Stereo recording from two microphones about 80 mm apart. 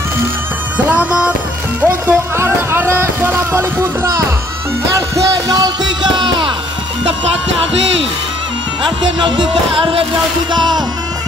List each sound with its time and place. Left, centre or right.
0.8 s music: centre
2.3 s music: right
4.9 s music: right
8.8 s music: right
10.5 s music: right